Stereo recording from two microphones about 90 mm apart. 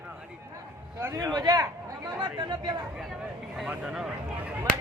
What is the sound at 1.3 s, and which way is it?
Speech, 50° right (ahead or behind).